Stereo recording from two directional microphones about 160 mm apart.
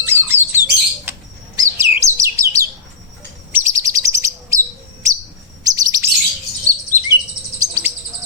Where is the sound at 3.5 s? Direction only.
20° right (ahead or behind).